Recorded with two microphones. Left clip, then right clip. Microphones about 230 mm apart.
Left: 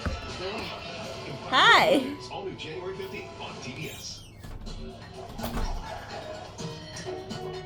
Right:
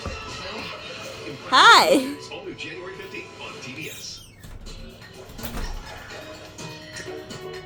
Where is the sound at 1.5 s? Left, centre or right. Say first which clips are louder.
Right 6 dB; right.